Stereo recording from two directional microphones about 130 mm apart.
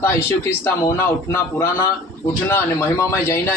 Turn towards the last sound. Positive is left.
turn(degrees=20)  # may be behind; listen again after turning